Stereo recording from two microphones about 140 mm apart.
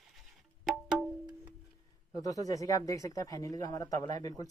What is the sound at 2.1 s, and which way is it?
Speech, 25° left (ahead or behind).